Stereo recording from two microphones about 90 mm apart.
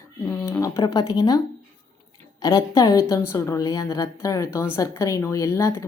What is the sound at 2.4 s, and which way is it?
A woman's voice, 45° left (ahead or behind).